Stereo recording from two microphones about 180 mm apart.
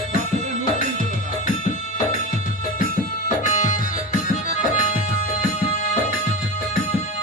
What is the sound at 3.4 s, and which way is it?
Music, 45° left (ahead or behind).